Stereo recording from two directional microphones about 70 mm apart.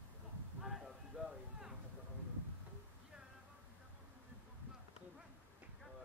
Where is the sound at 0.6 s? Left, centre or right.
Centre.